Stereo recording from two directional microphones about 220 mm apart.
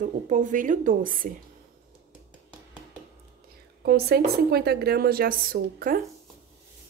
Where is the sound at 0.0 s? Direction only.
35° right (ahead or behind).